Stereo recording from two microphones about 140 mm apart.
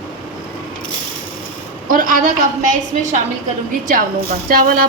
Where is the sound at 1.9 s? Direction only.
75° right (ahead or behind).